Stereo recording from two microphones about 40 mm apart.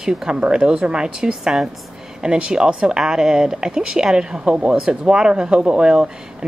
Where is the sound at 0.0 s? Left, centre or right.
Centre.